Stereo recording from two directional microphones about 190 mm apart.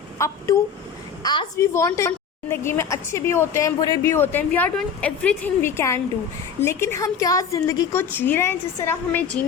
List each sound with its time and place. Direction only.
0.2 s a woman's voice: 15° left (ahead or behind)